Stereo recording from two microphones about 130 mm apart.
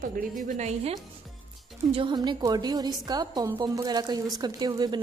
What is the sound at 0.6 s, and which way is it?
Speech, 55° right (ahead or behind).